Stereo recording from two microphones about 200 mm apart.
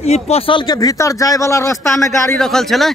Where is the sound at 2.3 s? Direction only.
Centre (ahead or behind).